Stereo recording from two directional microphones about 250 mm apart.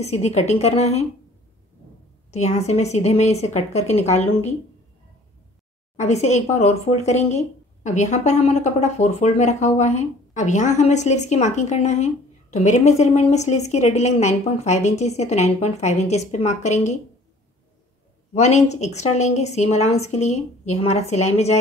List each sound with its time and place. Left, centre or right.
0.0 s speech: left
2.3 s speech: left
5.9 s speech: left
18.3 s speech: left